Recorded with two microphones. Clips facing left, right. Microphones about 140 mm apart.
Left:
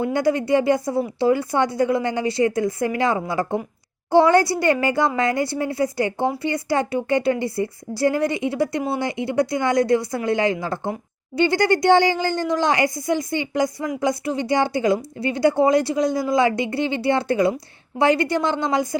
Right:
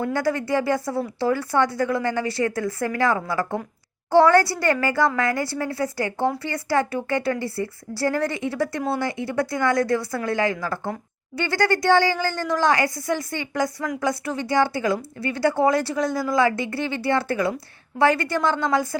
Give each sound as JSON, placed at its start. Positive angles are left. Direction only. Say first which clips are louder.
{"t": 0.0, "sound": "a woman's voice", "louder": "left 3 dB", "side_deg": 20}